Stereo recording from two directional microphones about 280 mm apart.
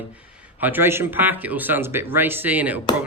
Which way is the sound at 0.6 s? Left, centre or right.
Centre.